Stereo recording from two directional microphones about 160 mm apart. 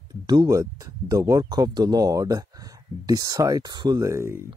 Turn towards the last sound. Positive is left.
turn(degrees=-15)  # may be behind; listen again after turning